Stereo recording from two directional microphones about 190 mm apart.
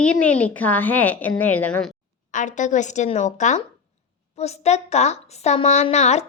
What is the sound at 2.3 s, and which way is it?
A woman's voice, 40° left (ahead or behind).